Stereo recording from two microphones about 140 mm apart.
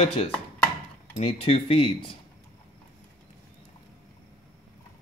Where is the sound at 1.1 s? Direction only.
45° left (ahead or behind).